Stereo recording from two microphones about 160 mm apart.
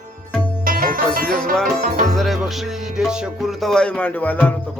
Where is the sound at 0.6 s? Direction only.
60° right (ahead or behind).